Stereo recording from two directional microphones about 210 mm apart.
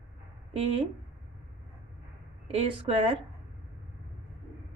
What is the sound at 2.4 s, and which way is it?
Speech, 25° right (ahead or behind).